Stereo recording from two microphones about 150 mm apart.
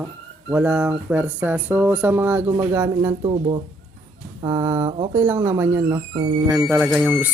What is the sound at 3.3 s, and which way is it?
Speech, 35° right (ahead or behind).